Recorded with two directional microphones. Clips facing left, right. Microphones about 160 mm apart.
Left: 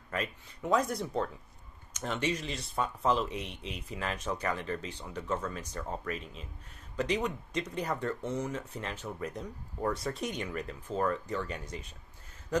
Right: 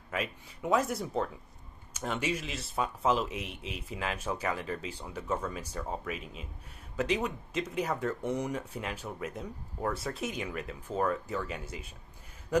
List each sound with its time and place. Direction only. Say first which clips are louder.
0.1 s speech: right 1 dB; 5° right (ahead or behind)
3.3 s speech: even; 30° left (ahead or behind)
3.9 s speech: even; 5° right (ahead or behind)